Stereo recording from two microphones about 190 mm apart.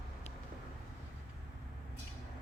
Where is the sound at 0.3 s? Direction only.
35° left (ahead or behind).